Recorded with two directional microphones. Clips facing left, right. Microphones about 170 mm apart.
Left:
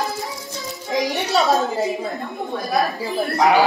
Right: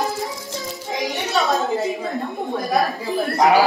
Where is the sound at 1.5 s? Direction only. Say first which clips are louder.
Left 1 dB; centre (ahead or behind).